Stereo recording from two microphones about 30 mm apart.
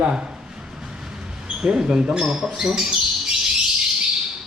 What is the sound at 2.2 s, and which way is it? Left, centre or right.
Speech, centre.